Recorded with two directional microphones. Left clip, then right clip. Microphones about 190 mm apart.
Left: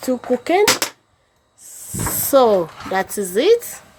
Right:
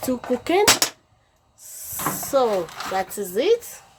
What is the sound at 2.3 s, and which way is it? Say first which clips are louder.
Speech: left 7 dB; 35° left (ahead or behind).